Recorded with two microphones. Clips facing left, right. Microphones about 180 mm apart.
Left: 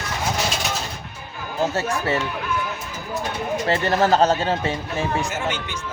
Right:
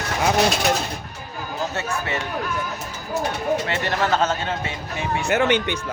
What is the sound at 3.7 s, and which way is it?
Speech, 35° left (ahead or behind).